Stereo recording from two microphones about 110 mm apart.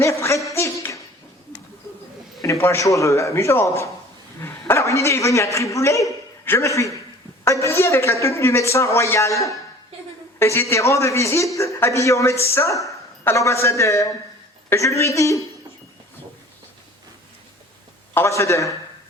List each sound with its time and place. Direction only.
0.0 s a sound: 25° left (ahead or behind)
2.4 s a woman's voice: 25° left (ahead or behind)
18.1 s a woman's voice: 25° left (ahead or behind)